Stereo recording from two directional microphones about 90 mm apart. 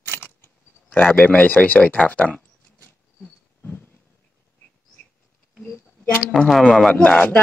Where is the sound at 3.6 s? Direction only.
15° left (ahead or behind).